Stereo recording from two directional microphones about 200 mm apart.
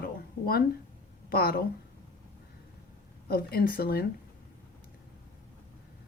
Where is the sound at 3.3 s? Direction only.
50° left (ahead or behind).